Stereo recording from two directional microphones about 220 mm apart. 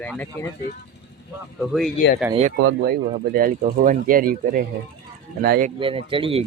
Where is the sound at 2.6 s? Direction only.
50° right (ahead or behind).